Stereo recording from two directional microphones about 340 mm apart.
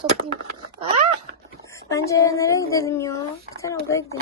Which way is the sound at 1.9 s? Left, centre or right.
Centre.